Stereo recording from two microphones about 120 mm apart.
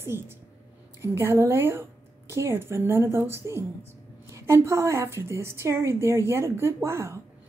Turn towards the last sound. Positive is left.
turn(degrees=-25)  # may be behind; listen again after turning